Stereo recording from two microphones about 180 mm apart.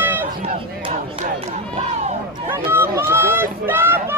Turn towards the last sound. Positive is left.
turn(degrees=-10)  # may be behind; listen again after turning